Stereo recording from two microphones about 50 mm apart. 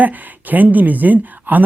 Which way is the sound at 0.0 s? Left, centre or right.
Right.